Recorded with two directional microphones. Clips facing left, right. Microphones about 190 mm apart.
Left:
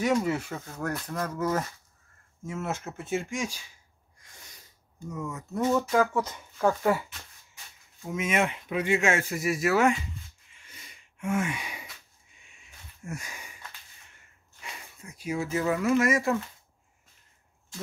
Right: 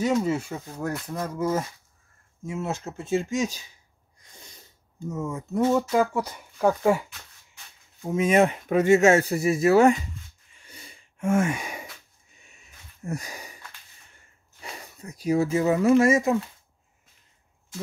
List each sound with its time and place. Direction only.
0.4 s speech: 15° right (ahead or behind)
4.2 s sneeze: 25° right (ahead or behind)
5.1 s speech: 25° right (ahead or behind)
5.7 s speech: 10° right (ahead or behind)
8.0 s speech: 35° right (ahead or behind)
10.6 s a sound: 35° right (ahead or behind)
15.5 s speech: 25° right (ahead or behind)